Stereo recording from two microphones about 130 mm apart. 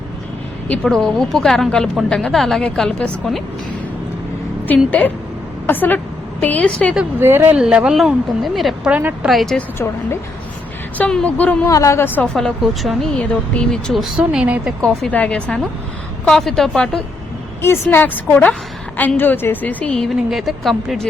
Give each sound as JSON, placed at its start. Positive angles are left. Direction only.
{"t": 0.7, "sound": "a woman's voice", "side_deg": 5}
{"t": 4.9, "sound": "a woman's voice", "side_deg": 15}
{"t": 7.2, "sound": "speech", "side_deg": -15}
{"t": 7.6, "sound": "a woman's voice", "side_deg": -5}
{"t": 8.9, "sound": "speech", "side_deg": -10}
{"t": 9.3, "sound": "a woman's voice", "side_deg": 0}
{"t": 9.6, "sound": "a woman's voice", "side_deg": 20}
{"t": 11.7, "sound": "a woman's voice", "side_deg": 25}
{"t": 14.8, "sound": "a woman's voice", "side_deg": 10}
{"t": 17.6, "sound": "a woman's voice", "side_deg": 15}